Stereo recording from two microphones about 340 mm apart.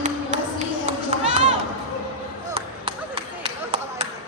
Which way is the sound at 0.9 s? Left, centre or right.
Centre.